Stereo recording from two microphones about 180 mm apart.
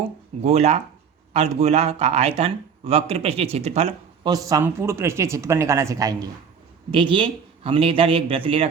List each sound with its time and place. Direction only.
0.4 s speech: 35° right (ahead or behind)
4.3 s a man's voice: 20° right (ahead or behind)